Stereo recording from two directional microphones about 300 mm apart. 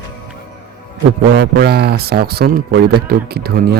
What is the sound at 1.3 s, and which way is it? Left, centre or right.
Speech, right.